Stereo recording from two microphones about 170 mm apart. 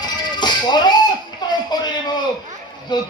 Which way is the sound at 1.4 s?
25° left (ahead or behind).